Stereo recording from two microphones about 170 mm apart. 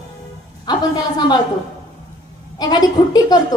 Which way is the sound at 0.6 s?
25° left (ahead or behind).